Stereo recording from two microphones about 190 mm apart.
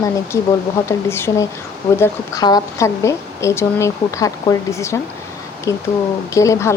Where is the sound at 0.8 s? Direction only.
15° left (ahead or behind).